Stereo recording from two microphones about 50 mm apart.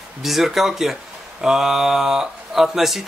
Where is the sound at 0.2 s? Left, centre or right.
Centre.